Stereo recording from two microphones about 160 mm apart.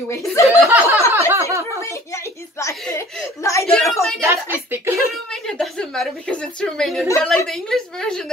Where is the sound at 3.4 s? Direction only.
20° left (ahead or behind).